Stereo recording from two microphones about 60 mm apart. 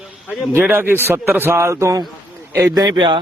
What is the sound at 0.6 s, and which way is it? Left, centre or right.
A man's voice, right.